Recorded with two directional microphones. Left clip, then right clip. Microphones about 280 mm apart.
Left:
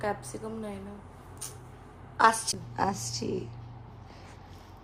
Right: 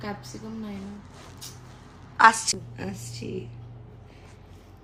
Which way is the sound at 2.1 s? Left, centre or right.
Centre.